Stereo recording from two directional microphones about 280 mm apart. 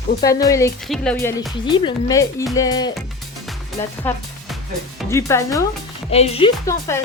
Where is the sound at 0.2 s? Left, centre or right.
Centre.